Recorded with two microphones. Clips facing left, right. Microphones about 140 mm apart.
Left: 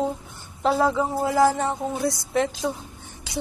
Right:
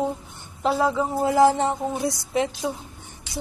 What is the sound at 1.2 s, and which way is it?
A woman's voice, 20° right (ahead or behind).